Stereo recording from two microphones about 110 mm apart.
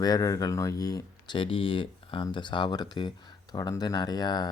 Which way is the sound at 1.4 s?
55° left (ahead or behind).